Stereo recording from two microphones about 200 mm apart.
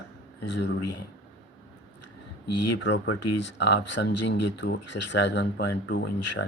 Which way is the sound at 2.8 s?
65° left (ahead or behind).